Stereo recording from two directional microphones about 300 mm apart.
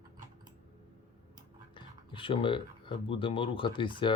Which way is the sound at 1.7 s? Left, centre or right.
Centre.